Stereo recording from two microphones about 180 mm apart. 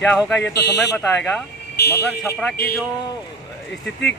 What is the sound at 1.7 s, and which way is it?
Speech, 65° left (ahead or behind).